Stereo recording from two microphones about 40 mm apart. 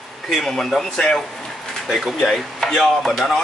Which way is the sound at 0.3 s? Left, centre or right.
Centre.